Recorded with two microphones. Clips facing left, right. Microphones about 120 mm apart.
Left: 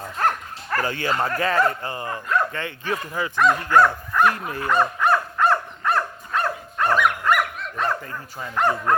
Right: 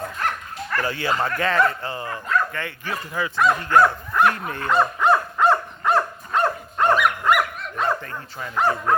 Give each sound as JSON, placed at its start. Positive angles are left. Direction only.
{"t": 0.2, "sound": "dog", "side_deg": 40}
{"t": 1.2, "sound": "speech", "side_deg": 35}
{"t": 1.8, "sound": "speech", "side_deg": 15}
{"t": 3.3, "sound": "speech", "side_deg": -10}
{"t": 4.7, "sound": "dog", "side_deg": -15}
{"t": 6.9, "sound": "dog", "side_deg": -5}
{"t": 8.5, "sound": "speech", "side_deg": -5}